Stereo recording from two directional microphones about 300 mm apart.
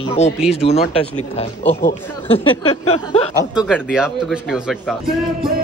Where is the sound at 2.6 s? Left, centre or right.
Centre.